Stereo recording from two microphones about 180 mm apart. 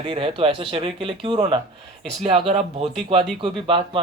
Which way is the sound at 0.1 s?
30° right (ahead or behind).